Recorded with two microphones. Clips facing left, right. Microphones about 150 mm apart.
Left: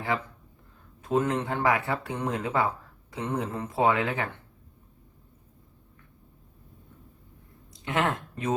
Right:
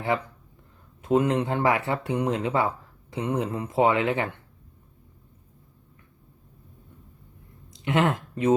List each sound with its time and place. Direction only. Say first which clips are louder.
1.0 s speech: right 4 dB; 20° right (ahead or behind)
7.7 s speech: right 4 dB; 25° right (ahead or behind)